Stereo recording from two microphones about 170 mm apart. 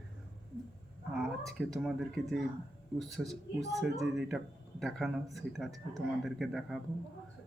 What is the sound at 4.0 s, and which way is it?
Speech, centre (ahead or behind).